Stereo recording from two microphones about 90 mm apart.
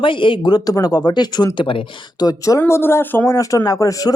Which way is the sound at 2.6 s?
25° left (ahead or behind).